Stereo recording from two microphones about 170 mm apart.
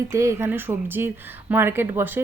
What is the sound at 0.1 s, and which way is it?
Speech, 15° right (ahead or behind).